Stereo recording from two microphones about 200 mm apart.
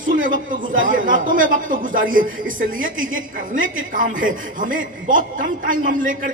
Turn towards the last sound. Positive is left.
turn(degrees=-40)  # may be behind; listen again after turning